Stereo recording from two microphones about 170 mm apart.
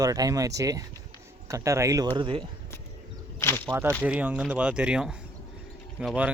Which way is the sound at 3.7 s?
15° right (ahead or behind).